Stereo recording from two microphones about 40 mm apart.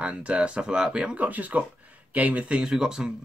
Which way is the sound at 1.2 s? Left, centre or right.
Right.